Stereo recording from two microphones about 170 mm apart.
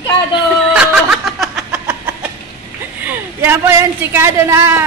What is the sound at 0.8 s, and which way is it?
Music, 5° right (ahead or behind).